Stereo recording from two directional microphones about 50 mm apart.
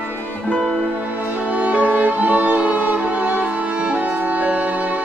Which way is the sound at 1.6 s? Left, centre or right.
Right.